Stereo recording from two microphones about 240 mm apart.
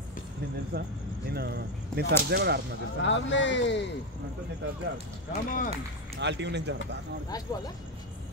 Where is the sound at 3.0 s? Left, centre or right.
Left.